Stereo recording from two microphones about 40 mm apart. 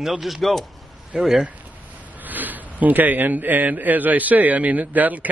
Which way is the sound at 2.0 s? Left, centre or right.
Right.